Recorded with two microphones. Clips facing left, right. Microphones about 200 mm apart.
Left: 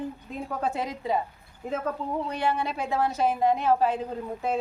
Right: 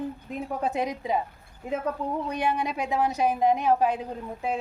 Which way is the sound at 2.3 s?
15° right (ahead or behind).